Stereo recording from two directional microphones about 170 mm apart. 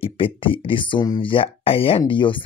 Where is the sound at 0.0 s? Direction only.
30° left (ahead or behind).